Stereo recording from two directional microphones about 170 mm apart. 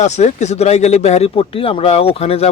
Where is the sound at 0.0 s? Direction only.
40° left (ahead or behind).